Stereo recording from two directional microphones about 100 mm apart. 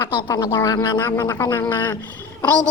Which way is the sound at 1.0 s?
25° left (ahead or behind).